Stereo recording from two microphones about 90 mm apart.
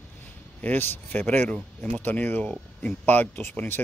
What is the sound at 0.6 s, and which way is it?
Speech, 20° left (ahead or behind).